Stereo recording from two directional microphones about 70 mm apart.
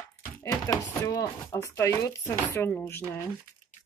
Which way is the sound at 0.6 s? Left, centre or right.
Left.